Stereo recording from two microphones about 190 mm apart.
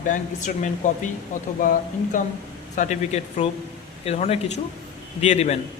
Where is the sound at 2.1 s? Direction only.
45° left (ahead or behind).